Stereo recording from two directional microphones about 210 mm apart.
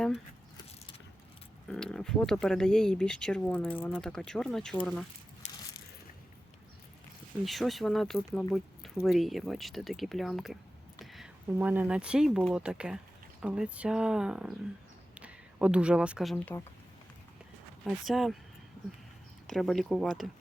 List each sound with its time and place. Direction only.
1.6 s speech: 5° left (ahead or behind)
5.4 s a sound: 35° left (ahead or behind)
7.4 s speech: centre (ahead or behind)
17.8 s speech: centre (ahead or behind)
19.5 s speech: centre (ahead or behind)